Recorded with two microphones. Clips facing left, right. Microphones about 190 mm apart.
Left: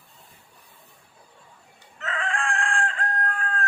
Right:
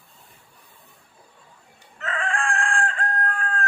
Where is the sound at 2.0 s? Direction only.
50° right (ahead or behind).